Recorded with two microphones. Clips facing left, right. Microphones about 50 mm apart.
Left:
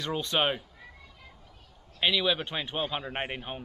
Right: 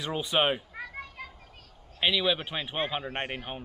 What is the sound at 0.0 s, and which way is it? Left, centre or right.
Speech, centre.